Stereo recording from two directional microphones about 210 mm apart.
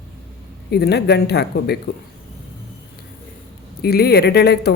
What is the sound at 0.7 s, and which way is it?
Speech, 50° left (ahead or behind).